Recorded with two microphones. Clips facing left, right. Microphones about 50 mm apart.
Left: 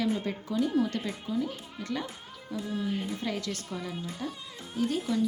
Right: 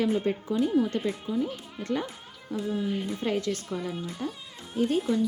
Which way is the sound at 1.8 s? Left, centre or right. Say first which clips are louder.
Right 4 dB; right.